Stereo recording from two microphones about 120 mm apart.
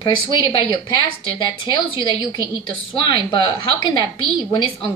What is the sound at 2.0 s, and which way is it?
A woman's voice, 40° left (ahead or behind).